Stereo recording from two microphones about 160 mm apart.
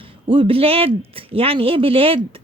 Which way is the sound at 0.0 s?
35° right (ahead or behind).